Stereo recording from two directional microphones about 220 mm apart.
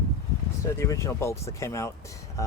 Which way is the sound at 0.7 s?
15° left (ahead or behind).